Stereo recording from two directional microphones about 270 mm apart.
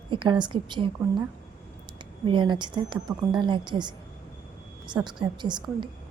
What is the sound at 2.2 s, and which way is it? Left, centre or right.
A woman's voice, centre.